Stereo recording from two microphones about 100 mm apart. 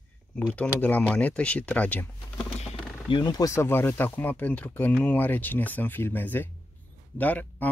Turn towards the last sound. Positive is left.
turn(degrees=15)  # may be behind; listen again after turning